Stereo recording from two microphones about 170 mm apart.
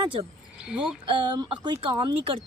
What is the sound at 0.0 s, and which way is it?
Speech, 30° right (ahead or behind).